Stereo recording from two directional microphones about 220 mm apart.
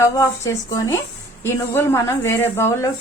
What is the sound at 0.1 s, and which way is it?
A woman's voice, 15° left (ahead or behind).